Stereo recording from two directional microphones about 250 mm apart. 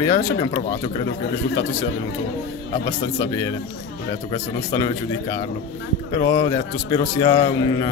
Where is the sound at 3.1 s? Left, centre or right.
Centre.